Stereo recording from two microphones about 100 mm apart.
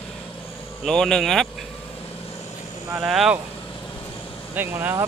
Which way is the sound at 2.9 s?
5° right (ahead or behind).